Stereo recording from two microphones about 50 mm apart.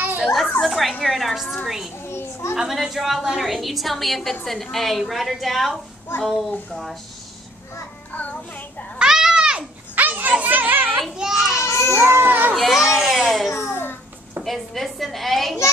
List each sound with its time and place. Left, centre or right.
0.2 s a woman's voice: centre
2.0 s a sound: left
2.5 s a woman's voice: centre
8.1 s music: left
9.1 s babbling: centre
9.9 s children playing: right
11.0 s a sound: centre
11.6 s baby cry: left
12.0 s a child's voice: right
12.3 s a child's voice: right
12.7 s baby cry: centre
13.5 s a sound: left
14.4 s a woman's voice: centre